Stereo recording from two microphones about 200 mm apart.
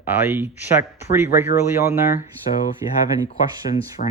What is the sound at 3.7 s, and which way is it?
Speech, 35° left (ahead or behind).